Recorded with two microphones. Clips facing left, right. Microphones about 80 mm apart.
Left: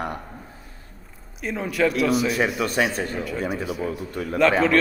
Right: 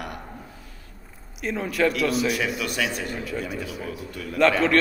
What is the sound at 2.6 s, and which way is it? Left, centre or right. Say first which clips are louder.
Speech: left 5 dB; left.